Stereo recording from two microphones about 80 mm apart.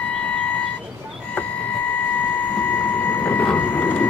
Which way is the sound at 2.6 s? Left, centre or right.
Left.